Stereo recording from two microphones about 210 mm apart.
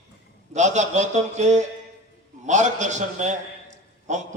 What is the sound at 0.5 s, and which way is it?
A man's voice, 35° right (ahead or behind).